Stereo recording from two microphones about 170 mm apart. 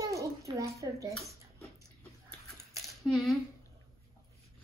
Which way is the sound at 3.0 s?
Centre (ahead or behind).